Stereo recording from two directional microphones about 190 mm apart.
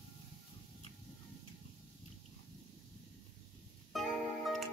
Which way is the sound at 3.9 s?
Centre (ahead or behind).